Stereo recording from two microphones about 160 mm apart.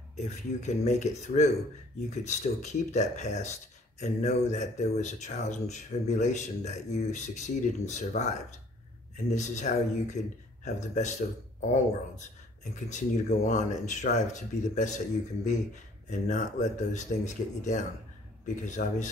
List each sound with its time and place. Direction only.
0.1 s speech: 45° left (ahead or behind)
12.7 s speech: 50° left (ahead or behind)